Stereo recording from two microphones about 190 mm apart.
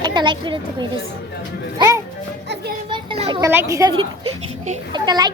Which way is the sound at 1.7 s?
15° right (ahead or behind).